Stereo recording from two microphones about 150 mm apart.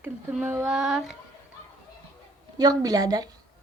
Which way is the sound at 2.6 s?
25° right (ahead or behind).